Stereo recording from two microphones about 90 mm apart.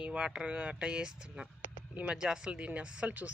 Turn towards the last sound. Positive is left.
turn(degrees=-15)  # may be behind; listen again after turning